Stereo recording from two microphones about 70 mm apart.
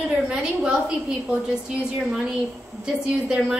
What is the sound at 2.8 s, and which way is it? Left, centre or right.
Speech, centre.